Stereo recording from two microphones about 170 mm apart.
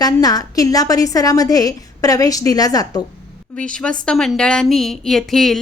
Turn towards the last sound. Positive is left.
turn(degrees=0)  # may be behind; listen again after turning